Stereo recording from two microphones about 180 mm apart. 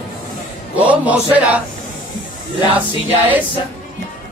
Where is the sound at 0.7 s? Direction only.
10° right (ahead or behind).